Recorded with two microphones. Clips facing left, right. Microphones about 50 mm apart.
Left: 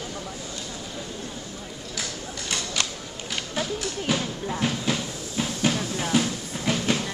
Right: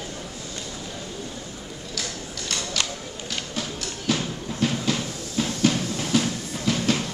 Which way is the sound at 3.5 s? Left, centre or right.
Centre.